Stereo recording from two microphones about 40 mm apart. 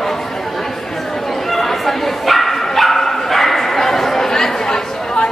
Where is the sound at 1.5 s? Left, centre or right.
Centre.